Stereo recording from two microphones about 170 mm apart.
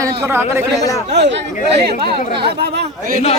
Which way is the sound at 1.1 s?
90° right.